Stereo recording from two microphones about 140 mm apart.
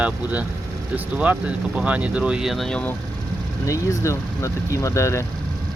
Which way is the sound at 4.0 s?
20° left (ahead or behind).